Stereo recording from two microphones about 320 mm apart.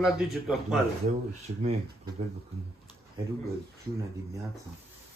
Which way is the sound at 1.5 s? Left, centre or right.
Right.